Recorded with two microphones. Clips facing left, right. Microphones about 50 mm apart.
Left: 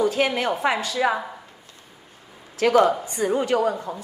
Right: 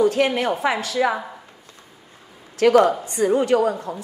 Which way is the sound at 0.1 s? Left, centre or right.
Right.